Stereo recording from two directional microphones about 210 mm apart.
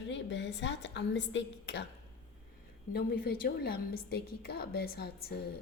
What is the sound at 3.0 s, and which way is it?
A woman's voice, 45° left (ahead or behind).